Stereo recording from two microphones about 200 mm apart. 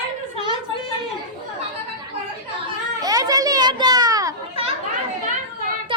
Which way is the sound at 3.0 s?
20° right (ahead or behind).